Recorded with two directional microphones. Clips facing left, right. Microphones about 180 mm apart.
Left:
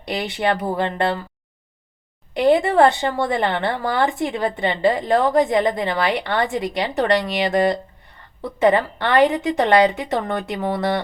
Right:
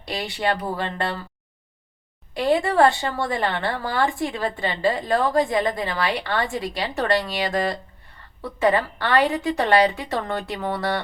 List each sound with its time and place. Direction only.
0.0 s a woman's voice: 20° left (ahead or behind)
2.3 s a woman's voice: 20° left (ahead or behind)